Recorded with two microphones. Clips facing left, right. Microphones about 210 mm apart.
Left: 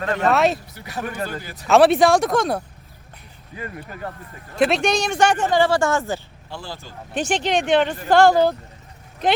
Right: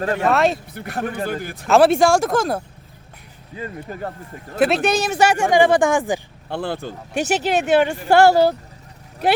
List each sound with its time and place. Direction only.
0.1 s speech: 5° right (ahead or behind)
0.7 s speech: 55° right (ahead or behind)
1.0 s speech: 30° right (ahead or behind)
1.6 s speech: centre (ahead or behind)
3.5 s speech: 25° right (ahead or behind)
4.5 s speech: 5° right (ahead or behind)
6.5 s speech: 60° right (ahead or behind)
7.1 s speech: 10° right (ahead or behind)